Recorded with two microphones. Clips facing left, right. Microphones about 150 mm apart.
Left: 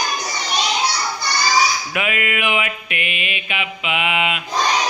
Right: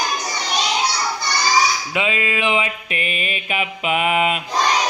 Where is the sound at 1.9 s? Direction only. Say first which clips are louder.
Right 1 dB; 25° right (ahead or behind).